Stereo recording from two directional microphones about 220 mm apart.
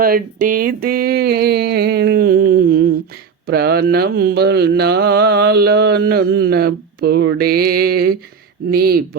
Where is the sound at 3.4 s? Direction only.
45° right (ahead or behind).